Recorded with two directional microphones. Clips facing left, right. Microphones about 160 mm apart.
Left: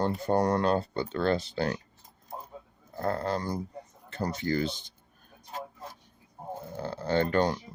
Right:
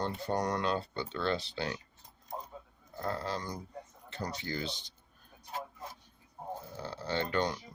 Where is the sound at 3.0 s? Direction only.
50° left (ahead or behind).